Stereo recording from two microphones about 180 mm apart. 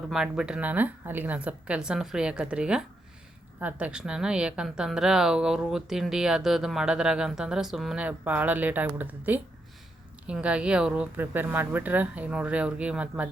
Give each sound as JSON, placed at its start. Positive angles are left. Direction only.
{"t": 0.1, "sound": "a woman's voice", "side_deg": -5}